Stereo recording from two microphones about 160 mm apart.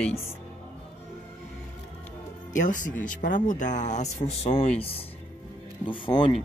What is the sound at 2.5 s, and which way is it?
Speech, 55° left (ahead or behind).